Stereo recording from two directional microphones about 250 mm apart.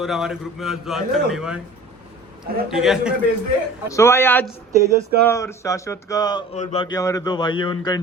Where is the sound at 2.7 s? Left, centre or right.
Centre.